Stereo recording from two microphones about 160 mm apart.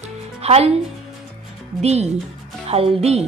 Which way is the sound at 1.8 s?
45° right (ahead or behind).